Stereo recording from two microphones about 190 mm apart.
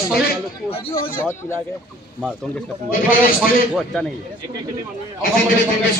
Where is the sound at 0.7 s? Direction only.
30° left (ahead or behind).